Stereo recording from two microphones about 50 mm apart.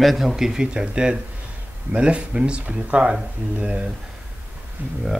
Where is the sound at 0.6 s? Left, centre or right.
Centre.